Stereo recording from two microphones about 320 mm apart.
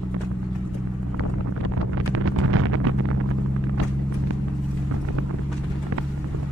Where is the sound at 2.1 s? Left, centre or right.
Right.